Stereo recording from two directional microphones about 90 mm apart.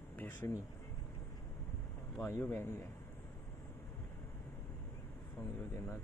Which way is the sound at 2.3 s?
25° left (ahead or behind).